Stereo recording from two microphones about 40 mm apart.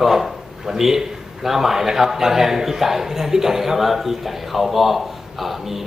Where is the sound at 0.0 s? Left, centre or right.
Centre.